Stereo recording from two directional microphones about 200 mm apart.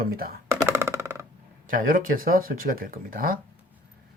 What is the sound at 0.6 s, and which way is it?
Music, 15° right (ahead or behind).